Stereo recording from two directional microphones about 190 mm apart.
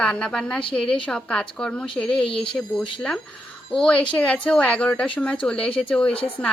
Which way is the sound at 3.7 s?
5° left (ahead or behind).